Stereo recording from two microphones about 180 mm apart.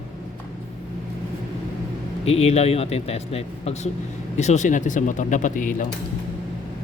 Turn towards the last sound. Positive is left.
turn(degrees=45)  # may be behind; listen again after turning